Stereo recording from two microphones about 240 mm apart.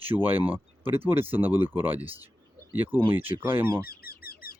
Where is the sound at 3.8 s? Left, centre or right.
Left.